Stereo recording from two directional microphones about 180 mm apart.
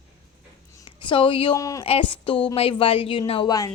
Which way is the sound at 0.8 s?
25° left (ahead or behind).